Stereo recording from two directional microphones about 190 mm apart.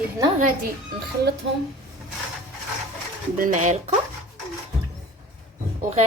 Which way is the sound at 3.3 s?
40° right (ahead or behind).